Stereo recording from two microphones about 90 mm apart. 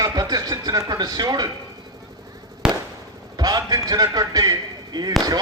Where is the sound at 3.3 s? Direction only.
45° right (ahead or behind).